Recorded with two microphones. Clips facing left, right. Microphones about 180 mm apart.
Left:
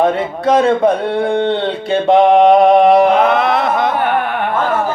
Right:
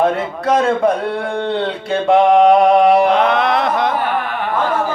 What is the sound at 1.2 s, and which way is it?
Mantra, 25° left (ahead or behind).